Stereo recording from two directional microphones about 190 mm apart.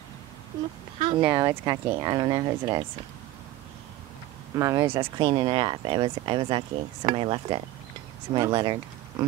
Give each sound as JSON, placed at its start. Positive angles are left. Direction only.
{"t": 0.9, "sound": "speech", "side_deg": -30}
{"t": 1.2, "sound": "speech", "side_deg": -10}
{"t": 4.6, "sound": "speech", "side_deg": -15}